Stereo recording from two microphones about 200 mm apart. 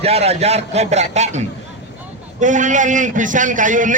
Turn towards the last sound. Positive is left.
turn(degrees=-40)  # may be behind; listen again after turning